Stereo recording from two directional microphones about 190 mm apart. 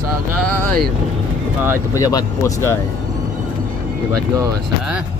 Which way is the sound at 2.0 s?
20° left (ahead or behind).